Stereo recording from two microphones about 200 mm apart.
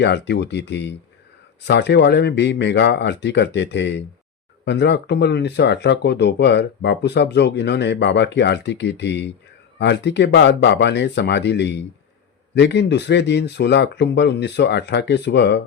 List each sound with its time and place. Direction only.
0.0 s speech: 60° left (ahead or behind)